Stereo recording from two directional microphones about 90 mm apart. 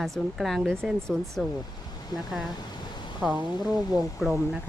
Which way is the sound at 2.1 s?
45° left (ahead or behind).